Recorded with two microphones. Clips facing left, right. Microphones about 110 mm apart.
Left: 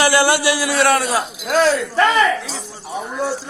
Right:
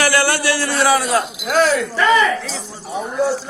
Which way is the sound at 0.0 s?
20° left (ahead or behind).